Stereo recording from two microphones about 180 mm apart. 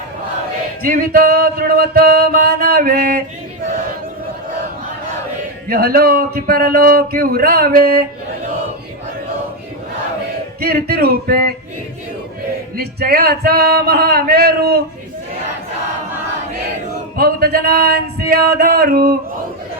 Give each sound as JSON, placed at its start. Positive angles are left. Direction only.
{"t": 0.8, "sound": "music", "side_deg": -55}
{"t": 5.6, "sound": "music", "side_deg": -55}
{"t": 10.6, "sound": "music", "side_deg": -55}
{"t": 12.7, "sound": "music", "side_deg": -60}
{"t": 17.2, "sound": "a sound", "side_deg": -55}